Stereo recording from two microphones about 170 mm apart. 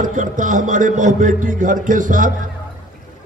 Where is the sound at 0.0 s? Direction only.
50° right (ahead or behind).